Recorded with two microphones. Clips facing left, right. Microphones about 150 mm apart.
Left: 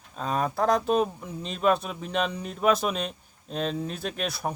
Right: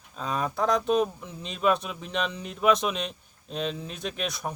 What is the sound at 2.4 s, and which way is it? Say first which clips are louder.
Speech: right 2 dB; 5° left (ahead or behind).